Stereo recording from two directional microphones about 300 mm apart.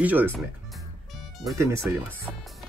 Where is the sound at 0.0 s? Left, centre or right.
Centre.